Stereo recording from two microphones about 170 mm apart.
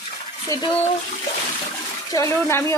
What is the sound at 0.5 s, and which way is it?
Speech, 20° left (ahead or behind).